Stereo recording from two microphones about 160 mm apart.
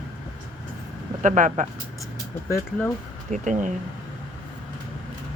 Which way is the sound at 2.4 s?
15° left (ahead or behind).